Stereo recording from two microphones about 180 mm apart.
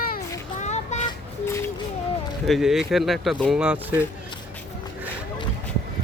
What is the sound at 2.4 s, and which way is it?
Speech, centre (ahead or behind).